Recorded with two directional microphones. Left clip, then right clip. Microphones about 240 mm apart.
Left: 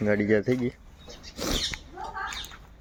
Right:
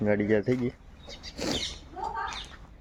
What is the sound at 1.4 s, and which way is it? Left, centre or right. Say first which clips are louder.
Rodents: left 2 dB; centre.